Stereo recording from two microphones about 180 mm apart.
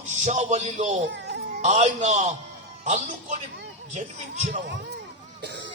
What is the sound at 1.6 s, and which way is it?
A man's voice, 40° right (ahead or behind).